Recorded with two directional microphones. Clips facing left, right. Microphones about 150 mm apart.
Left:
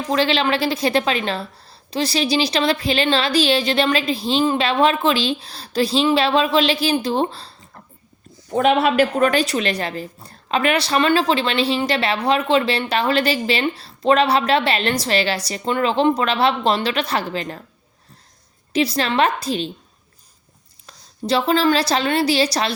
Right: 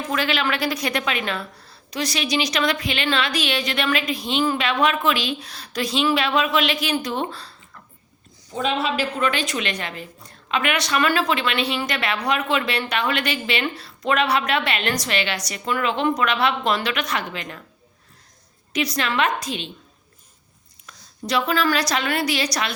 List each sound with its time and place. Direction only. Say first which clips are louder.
0.1 s a woman's voice: left 6 dB; 30° left (ahead or behind)
8.4 s a woman's voice: left 7 dB; 60° left (ahead or behind); by 17.6 s 35° left (ahead or behind)
18.7 s a woman's voice: left 5 dB; 30° left (ahead or behind)
20.8 s a woman's voice: left 5 dB; 30° left (ahead or behind)